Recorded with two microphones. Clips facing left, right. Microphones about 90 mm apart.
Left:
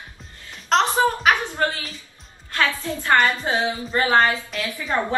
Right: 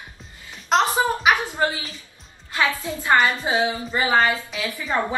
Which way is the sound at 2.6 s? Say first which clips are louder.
Even; 15° right (ahead or behind).